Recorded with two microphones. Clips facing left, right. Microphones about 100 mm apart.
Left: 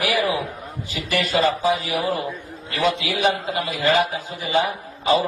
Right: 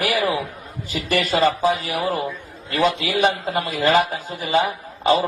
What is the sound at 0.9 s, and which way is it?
A man's voice, 45° right (ahead or behind).